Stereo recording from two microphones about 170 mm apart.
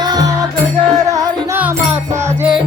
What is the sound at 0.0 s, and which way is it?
Music, 25° right (ahead or behind).